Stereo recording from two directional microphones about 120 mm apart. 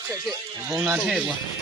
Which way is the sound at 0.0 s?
30° right (ahead or behind).